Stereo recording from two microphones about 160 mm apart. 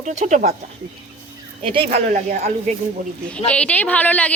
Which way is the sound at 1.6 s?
35° right (ahead or behind).